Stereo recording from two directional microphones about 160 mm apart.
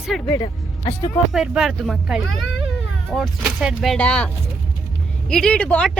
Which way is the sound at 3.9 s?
10° left (ahead or behind).